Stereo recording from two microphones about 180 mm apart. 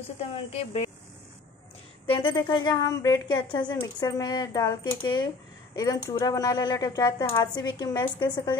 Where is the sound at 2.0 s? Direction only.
30° left (ahead or behind).